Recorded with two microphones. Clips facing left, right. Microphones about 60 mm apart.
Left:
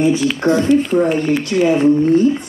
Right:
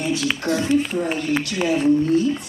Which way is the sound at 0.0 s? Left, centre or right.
Left.